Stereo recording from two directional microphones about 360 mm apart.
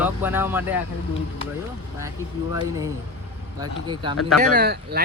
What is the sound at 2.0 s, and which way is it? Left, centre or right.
Speech, centre.